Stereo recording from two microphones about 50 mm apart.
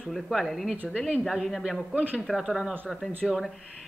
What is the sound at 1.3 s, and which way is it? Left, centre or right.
Speech, centre.